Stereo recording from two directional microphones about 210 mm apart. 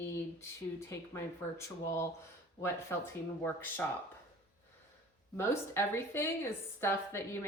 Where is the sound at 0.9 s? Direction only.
10° left (ahead or behind).